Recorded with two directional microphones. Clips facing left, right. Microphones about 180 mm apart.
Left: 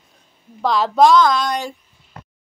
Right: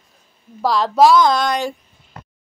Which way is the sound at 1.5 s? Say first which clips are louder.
Right 3 dB; 90° right.